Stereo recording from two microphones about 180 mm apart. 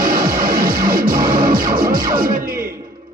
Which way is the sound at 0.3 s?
50° right (ahead or behind).